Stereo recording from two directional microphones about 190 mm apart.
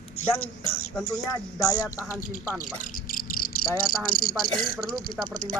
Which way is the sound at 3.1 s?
50° left (ahead or behind).